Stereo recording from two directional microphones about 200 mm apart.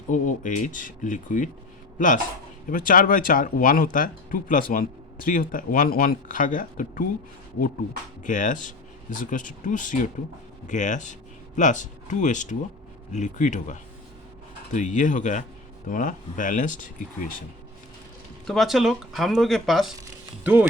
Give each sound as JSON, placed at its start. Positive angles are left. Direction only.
{"t": 0.1, "sound": "speech", "side_deg": 40}
{"t": 8.2, "sound": "speech", "side_deg": 40}
{"t": 18.4, "sound": "speech", "side_deg": 0}